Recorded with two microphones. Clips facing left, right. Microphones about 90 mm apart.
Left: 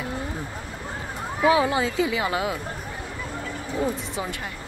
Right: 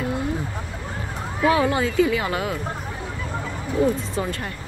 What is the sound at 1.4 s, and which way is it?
Speech, 20° left (ahead or behind).